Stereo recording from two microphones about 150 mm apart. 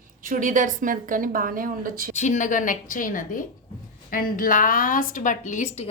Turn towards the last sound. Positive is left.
turn(degrees=50)  # may be behind; listen again after turning